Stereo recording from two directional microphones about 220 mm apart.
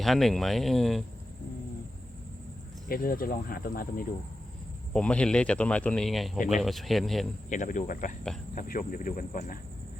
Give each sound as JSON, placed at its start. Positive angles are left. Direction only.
{"t": 0.0, "sound": "speech", "side_deg": 0}
{"t": 2.9, "sound": "speech", "side_deg": 40}
{"t": 4.9, "sound": "speech", "side_deg": 5}
{"t": 7.5, "sound": "speech", "side_deg": 35}